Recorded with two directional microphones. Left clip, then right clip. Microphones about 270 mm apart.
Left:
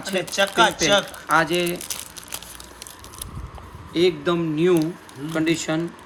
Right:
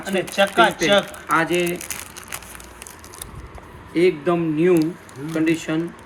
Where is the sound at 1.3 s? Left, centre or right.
Left.